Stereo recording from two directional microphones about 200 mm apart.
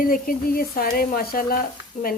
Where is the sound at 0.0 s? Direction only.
45° left (ahead or behind).